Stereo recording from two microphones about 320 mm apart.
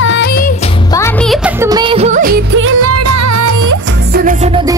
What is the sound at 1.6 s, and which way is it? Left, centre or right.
Music, centre.